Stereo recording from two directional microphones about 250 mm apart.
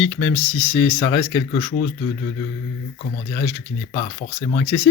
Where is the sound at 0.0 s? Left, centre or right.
Centre.